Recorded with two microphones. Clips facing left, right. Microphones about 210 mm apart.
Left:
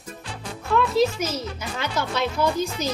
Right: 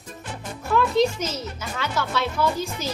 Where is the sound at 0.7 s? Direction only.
Centre (ahead or behind).